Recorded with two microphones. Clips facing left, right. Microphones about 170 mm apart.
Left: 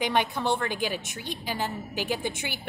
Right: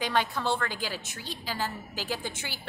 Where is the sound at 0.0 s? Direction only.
20° left (ahead or behind).